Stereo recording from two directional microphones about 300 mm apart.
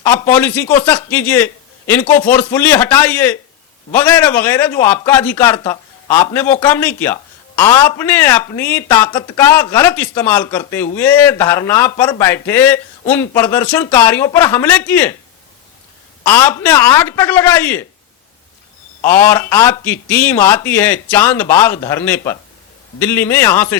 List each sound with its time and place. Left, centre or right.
0.2 s a man's voice: centre
16.2 s a man's voice: centre
19.0 s a man's voice: centre